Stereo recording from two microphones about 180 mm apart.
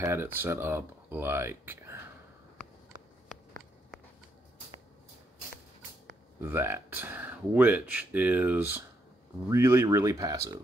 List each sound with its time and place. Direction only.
0.0 s speech: 15° right (ahead or behind)
6.4 s speech: 15° right (ahead or behind)